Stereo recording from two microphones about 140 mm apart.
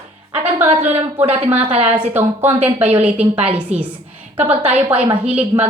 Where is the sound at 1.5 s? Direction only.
10° right (ahead or behind).